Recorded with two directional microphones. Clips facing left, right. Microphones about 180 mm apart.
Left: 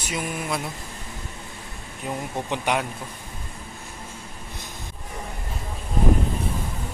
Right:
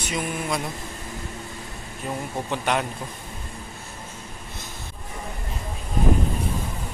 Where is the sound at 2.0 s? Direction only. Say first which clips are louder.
Even; 15° left (ahead or behind).